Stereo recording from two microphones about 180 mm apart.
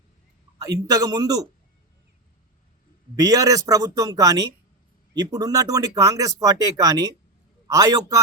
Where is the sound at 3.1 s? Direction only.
20° right (ahead or behind).